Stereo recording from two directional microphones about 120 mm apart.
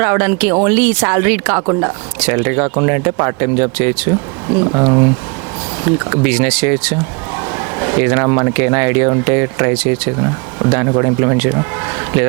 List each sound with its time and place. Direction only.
0.0 s speech: 20° right (ahead or behind)
1.6 s speech: 30° right (ahead or behind)
4.6 s speech: 30° right (ahead or behind)
5.8 s speech: 20° right (ahead or behind)